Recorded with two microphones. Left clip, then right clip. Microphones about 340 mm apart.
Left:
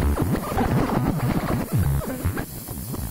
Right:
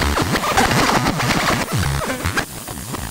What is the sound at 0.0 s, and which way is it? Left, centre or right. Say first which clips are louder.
Music: right 8 dB; right.